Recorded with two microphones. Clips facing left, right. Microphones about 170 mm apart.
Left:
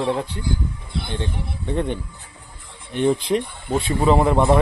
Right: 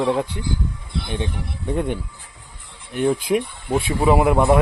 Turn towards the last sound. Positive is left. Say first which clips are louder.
# right 1 dB
turn(degrees=-5)  # may be behind; listen again after turning